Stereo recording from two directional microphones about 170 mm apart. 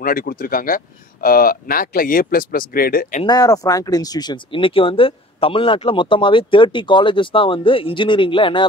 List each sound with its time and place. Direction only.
0.0 s speech: 60° left (ahead or behind)
3.3 s speech: 20° left (ahead or behind)